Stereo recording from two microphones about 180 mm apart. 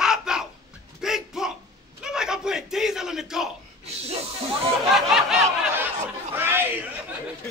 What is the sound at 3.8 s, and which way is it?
Snake, 35° right (ahead or behind).